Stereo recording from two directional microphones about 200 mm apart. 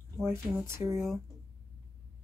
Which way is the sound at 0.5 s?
15° right (ahead or behind).